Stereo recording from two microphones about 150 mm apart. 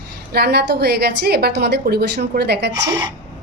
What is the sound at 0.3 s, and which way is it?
A woman's voice, 90° right.